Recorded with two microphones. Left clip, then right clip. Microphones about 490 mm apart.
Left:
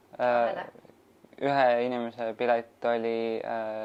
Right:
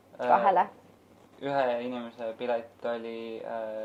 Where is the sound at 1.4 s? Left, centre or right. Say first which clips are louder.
Left 5 dB; left.